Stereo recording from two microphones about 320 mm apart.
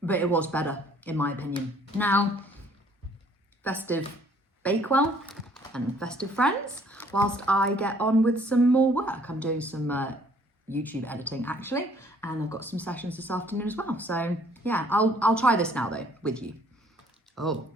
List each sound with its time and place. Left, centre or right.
0.0 s speech: centre
3.6 s speech: centre